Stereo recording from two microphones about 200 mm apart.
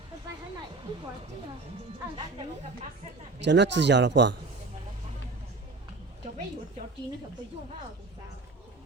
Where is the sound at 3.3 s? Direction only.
60° right (ahead or behind).